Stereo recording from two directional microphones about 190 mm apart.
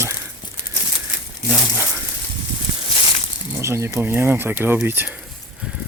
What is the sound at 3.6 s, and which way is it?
Speech, 15° right (ahead or behind).